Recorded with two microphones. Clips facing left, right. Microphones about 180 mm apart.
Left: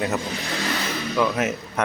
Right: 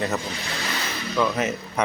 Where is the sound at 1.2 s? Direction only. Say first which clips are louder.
Left 1 dB; 5° left (ahead or behind).